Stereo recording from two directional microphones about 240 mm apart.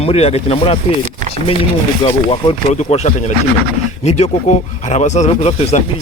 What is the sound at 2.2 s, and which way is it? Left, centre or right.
Speech, left.